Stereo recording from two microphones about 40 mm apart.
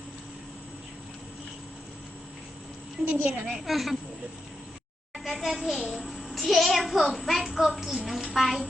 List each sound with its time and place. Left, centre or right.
3.2 s a woman's voice: right
3.7 s a child's voice: centre
5.4 s a child's voice: centre